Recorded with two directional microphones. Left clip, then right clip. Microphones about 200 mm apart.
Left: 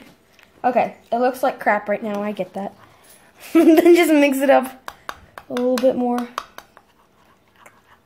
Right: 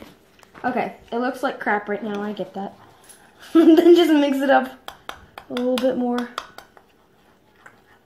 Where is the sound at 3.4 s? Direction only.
50° left (ahead or behind).